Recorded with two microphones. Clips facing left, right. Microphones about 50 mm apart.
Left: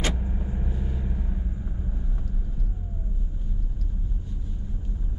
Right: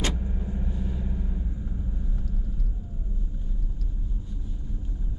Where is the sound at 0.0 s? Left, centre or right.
Centre.